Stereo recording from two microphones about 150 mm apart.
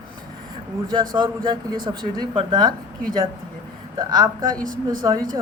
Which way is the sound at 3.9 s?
25° right (ahead or behind).